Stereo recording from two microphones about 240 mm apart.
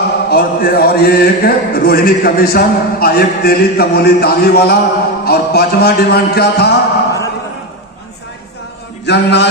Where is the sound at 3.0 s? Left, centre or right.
Left.